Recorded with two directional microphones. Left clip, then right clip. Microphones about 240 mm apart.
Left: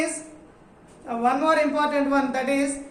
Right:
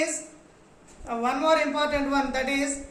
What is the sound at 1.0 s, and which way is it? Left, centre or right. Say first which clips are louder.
A man's voice: left 2 dB; centre.